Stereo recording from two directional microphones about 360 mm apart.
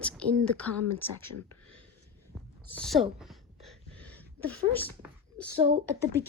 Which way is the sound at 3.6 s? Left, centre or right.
Centre.